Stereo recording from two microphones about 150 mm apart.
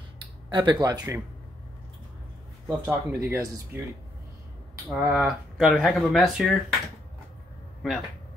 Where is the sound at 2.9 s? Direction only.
15° right (ahead or behind).